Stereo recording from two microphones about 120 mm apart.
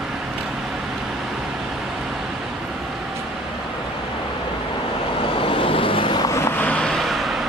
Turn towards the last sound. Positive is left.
turn(degrees=0)  # may be behind; listen again after turning